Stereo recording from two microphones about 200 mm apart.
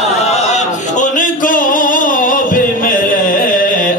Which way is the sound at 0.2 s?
35° left (ahead or behind).